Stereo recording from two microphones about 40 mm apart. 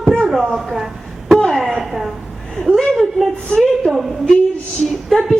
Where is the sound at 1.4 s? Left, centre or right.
Centre.